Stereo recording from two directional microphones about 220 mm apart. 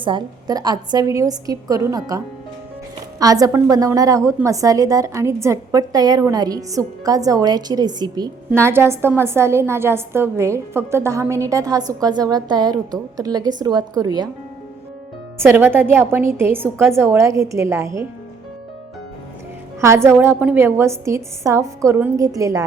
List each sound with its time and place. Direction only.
0.0 s a woman's voice: 20° right (ahead or behind)
15.4 s a woman's voice: 10° right (ahead or behind)
19.8 s a woman's voice: 10° right (ahead or behind)